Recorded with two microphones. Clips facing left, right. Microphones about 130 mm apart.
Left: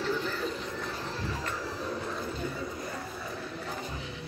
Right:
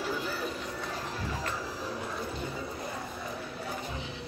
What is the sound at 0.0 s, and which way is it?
Music, 10° right (ahead or behind).